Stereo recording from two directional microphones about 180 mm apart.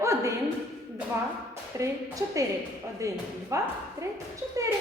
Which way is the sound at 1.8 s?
20° right (ahead or behind).